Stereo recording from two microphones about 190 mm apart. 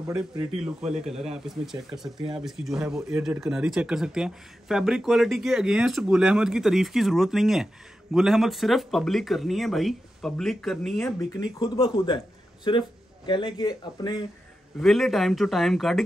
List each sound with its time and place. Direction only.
0.7 s speech: 5° right (ahead or behind)
11.1 s speech: 20° left (ahead or behind)
14.8 s speech: centre (ahead or behind)